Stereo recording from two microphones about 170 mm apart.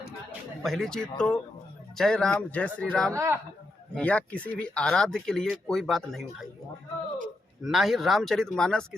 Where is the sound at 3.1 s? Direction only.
15° right (ahead or behind).